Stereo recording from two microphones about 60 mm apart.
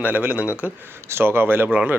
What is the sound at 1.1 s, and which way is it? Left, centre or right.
Speech, right.